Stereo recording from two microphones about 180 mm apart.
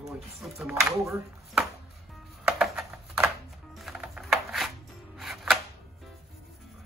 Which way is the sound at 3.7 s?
Centre (ahead or behind).